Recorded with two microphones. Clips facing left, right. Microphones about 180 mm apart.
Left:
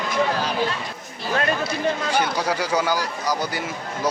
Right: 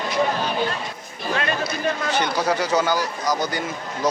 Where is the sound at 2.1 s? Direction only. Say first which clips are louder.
Right 1 dB; 10° left (ahead or behind).